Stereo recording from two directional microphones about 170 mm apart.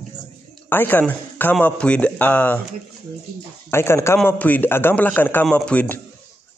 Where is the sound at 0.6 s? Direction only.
10° left (ahead or behind).